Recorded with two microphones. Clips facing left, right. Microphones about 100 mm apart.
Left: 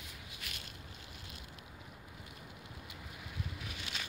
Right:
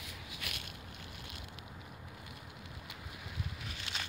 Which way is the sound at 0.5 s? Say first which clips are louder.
Right 4 dB; 65° right (ahead or behind).